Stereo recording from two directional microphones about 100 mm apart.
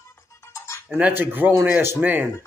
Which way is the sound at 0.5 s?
25° left (ahead or behind).